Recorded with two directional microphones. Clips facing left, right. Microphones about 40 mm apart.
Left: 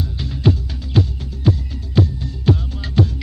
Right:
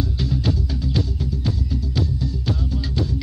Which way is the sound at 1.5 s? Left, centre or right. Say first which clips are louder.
Left 9 dB; left.